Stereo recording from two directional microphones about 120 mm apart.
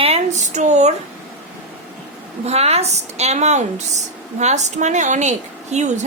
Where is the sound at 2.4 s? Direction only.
60° right (ahead or behind).